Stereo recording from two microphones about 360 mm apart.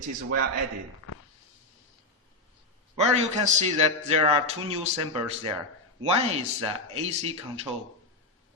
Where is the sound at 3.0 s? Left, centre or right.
Centre.